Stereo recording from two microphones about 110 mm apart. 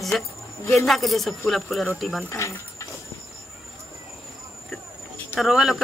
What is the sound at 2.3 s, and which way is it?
Speech, 25° left (ahead or behind).